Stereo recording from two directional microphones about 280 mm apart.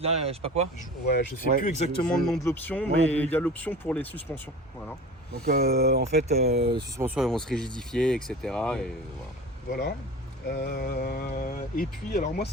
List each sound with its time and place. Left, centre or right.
0.0 s speech: right
0.8 s speech: left
1.6 s speech: left
2.1 s speech: centre
5.3 s speech: right
6.6 s speech: centre
10.5 s speech: left